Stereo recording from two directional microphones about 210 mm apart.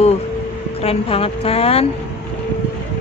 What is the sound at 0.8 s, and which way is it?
A woman's voice, 30° left (ahead or behind).